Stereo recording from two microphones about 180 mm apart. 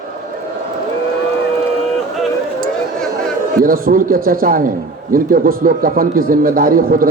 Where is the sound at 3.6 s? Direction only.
50° right (ahead or behind).